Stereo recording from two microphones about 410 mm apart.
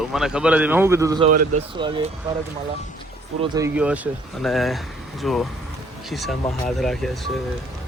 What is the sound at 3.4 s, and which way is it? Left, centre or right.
Speech, centre.